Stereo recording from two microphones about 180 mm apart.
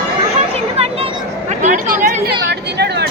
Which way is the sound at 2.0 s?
65° right (ahead or behind).